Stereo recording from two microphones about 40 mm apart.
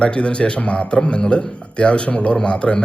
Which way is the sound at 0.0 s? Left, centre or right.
Left.